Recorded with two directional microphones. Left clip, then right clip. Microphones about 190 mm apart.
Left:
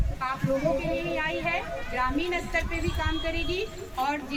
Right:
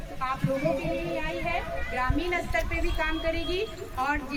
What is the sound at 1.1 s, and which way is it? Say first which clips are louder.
Speech: left 2 dB; 30° left (ahead or behind).